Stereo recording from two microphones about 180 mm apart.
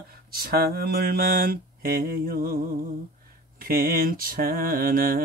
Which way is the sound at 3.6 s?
55° right (ahead or behind).